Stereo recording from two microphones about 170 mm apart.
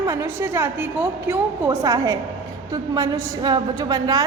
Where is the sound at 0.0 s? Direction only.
15° right (ahead or behind).